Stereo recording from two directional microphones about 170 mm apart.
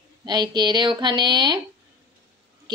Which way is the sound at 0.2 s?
25° right (ahead or behind).